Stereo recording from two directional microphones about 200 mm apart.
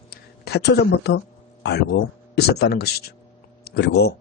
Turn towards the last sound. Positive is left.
turn(degrees=55)  # may be behind; listen again after turning